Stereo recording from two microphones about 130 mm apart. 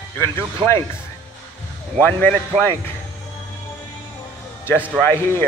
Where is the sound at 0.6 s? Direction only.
40° right (ahead or behind).